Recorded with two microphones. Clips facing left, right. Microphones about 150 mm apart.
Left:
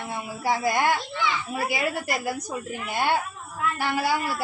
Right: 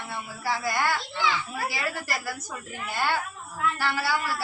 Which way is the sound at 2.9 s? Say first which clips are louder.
Left 3 dB; 15° left (ahead or behind).